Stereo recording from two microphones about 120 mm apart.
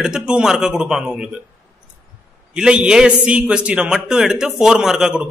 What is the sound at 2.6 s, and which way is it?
A man's voice, 5° right (ahead or behind).